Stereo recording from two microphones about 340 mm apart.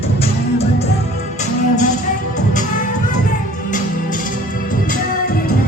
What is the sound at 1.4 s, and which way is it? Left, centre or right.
Music, left.